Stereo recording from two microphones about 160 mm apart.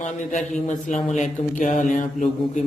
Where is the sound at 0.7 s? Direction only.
50° left (ahead or behind).